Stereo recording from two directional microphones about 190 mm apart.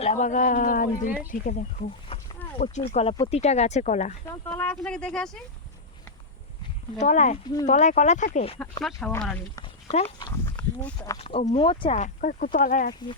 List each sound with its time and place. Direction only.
0.0 s speech: 40° left (ahead or behind)
2.1 s a sound: 30° left (ahead or behind)
2.6 s speech: 55° left (ahead or behind)
2.9 s speech: 35° left (ahead or behind)
4.4 s speech: 5° left (ahead or behind)
7.0 s speech: 40° left (ahead or behind)
8.8 s speech: centre (ahead or behind)
10.2 s a sound: 20° left (ahead or behind)
10.6 s speech: 5° left (ahead or behind)
11.2 s speech: 30° left (ahead or behind); by 12.9 s 45° left (ahead or behind)